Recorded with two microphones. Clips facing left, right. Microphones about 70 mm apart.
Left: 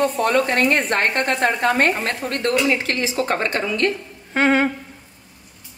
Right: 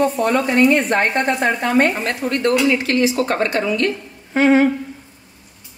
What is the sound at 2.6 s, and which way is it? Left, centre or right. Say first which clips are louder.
Speech: right 5 dB; left.